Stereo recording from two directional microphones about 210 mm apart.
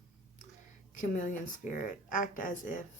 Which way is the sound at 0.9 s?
35° left (ahead or behind).